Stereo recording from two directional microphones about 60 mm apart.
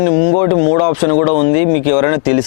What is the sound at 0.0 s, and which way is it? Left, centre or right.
Speech, left.